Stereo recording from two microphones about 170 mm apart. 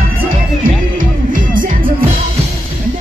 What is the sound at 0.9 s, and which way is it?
Music, 55° right (ahead or behind).